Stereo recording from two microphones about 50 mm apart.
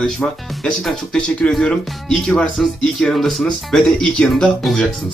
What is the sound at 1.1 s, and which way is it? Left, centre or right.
Speech, centre.